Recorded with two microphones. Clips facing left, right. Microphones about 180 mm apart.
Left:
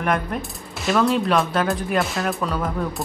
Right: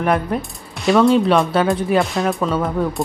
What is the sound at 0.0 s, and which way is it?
Speech, centre (ahead or behind).